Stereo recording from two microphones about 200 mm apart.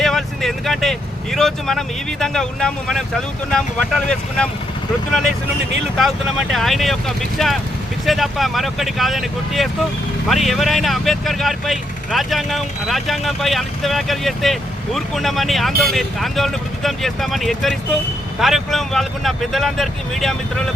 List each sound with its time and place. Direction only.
0.0 s speech: centre (ahead or behind)
6.0 s speech: centre (ahead or behind)